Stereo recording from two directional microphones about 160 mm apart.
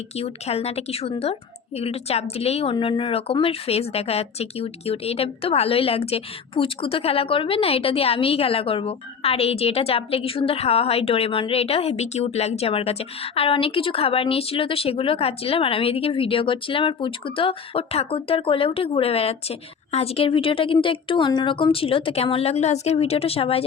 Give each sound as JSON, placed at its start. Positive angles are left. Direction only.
{"t": 0.2, "sound": "a woman's voice", "side_deg": 40}